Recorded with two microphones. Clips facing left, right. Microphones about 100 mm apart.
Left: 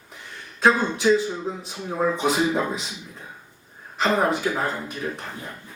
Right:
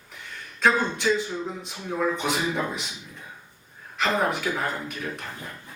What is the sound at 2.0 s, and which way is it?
Speech, 30° left (ahead or behind).